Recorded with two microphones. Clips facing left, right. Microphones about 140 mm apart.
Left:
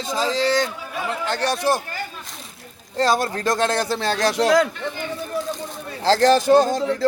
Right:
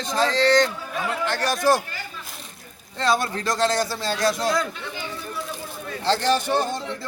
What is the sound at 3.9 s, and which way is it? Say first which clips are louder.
Speech: left 3 dB; 75° left (ahead or behind).